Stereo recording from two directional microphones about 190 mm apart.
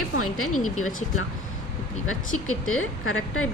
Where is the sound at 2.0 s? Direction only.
90° left.